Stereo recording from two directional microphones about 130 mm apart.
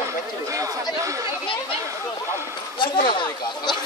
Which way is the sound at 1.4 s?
40° left (ahead or behind).